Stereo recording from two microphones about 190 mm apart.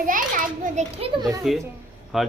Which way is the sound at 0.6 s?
40° right (ahead or behind).